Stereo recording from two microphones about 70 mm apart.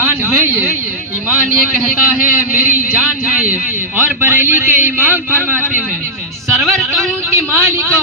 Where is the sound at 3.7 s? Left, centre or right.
Right.